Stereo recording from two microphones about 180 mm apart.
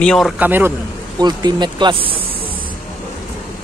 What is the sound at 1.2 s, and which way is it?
Speech, 25° right (ahead or behind).